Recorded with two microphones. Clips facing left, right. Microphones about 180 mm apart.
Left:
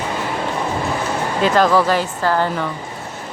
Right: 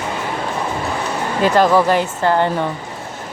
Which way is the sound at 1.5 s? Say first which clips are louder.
Right 2 dB; 15° right (ahead or behind).